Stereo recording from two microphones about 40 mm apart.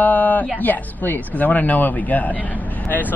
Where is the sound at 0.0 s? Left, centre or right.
Left.